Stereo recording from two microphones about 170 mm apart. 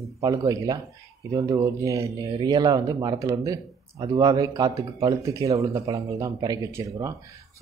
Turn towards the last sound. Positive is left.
turn(degrees=-20)  # may be behind; listen again after turning